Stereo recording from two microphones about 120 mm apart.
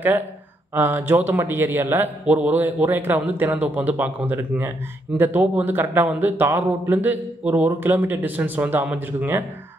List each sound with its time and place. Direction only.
0.7 s a man's voice: 20° right (ahead or behind)